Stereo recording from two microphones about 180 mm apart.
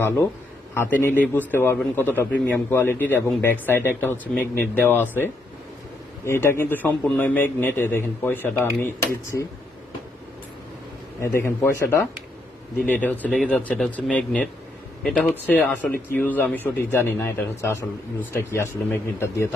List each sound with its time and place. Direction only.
0.7 s a man's voice: 10° left (ahead or behind)
6.2 s a man's voice: 15° left (ahead or behind)
11.2 s a man's voice: 15° left (ahead or behind); by 15.4 s 5° right (ahead or behind)
15.4 s a man's voice: 10° left (ahead or behind)